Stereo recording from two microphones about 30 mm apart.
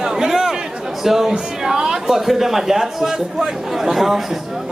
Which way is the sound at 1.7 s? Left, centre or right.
Right.